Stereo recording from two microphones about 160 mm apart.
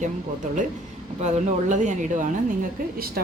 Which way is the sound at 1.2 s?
50° right (ahead or behind).